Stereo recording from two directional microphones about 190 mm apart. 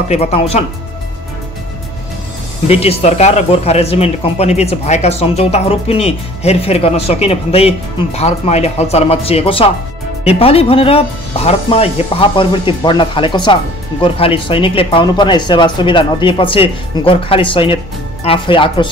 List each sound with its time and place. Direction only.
0.1 s speech: 35° left (ahead or behind)
2.7 s speech: 30° left (ahead or behind)